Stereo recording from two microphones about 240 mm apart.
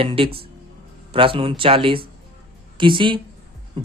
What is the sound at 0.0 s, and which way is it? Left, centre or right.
A man's voice, right.